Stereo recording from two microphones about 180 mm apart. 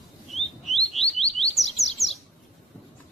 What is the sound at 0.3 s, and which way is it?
Chirp, centre (ahead or behind).